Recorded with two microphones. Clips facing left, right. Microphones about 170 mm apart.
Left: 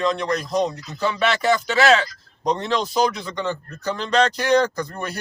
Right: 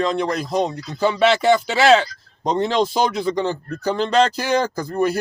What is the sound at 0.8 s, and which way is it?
Speech, 30° right (ahead or behind).